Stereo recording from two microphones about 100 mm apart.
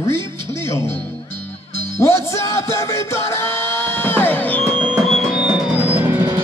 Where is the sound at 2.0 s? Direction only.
30° left (ahead or behind).